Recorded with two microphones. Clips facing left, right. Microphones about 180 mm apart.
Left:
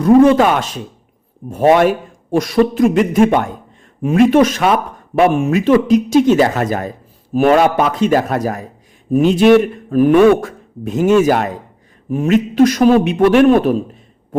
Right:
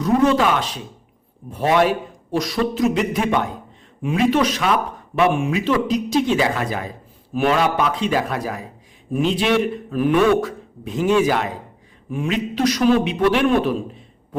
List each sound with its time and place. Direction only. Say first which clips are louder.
0.0 s speech: left 8 dB; 55° left (ahead or behind)